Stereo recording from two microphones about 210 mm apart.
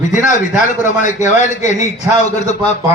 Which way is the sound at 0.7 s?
35° left (ahead or behind).